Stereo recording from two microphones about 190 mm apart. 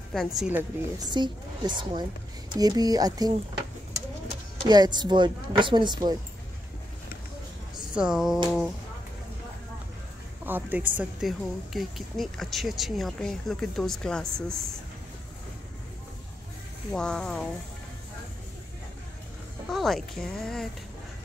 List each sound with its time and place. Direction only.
0.1 s a woman's voice: centre (ahead or behind)
1.1 s speech: 25° right (ahead or behind)
4.6 s speech: 20° right (ahead or behind)
7.9 s a woman's voice: 5° right (ahead or behind)
10.4 s a woman's voice: 10° right (ahead or behind)
16.9 s a woman's voice: 5° left (ahead or behind)
19.7 s a woman's voice: centre (ahead or behind)